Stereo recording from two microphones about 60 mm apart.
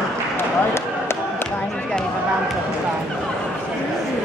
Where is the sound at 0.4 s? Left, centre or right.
Left.